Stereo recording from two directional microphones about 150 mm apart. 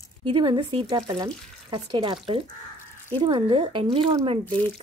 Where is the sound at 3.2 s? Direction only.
30° right (ahead or behind).